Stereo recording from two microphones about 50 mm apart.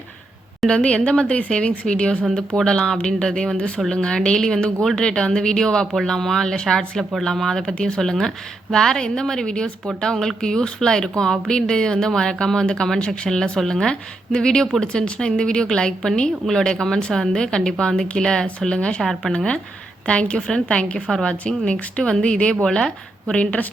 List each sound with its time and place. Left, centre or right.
0.7 s a woman's voice: left
20.1 s a woman's voice: left
23.3 s a woman's voice: left